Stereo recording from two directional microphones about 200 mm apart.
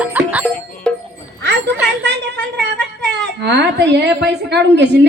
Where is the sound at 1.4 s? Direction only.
60° right (ahead or behind).